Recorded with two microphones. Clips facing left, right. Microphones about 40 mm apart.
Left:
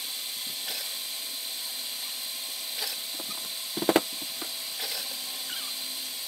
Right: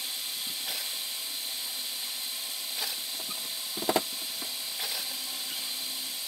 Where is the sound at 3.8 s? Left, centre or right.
Centre.